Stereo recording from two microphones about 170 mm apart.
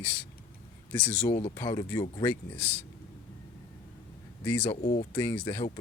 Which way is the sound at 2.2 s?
10° left (ahead or behind).